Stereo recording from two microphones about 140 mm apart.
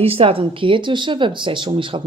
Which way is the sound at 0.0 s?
45° right (ahead or behind).